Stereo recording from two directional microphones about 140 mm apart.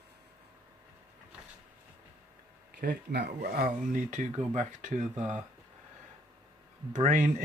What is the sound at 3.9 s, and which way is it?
Speech, 65° right (ahead or behind).